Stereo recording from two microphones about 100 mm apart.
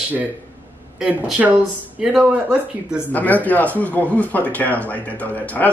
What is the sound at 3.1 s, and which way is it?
A man's voice, 15° left (ahead or behind).